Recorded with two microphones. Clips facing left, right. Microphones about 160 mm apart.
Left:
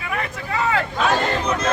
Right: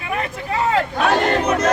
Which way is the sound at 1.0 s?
60° right (ahead or behind).